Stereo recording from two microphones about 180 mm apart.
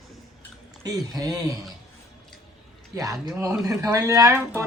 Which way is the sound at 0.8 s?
20° right (ahead or behind).